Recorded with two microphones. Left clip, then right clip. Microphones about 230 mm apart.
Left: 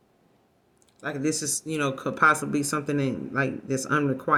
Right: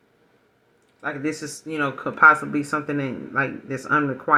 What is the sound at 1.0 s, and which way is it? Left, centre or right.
Speech, left.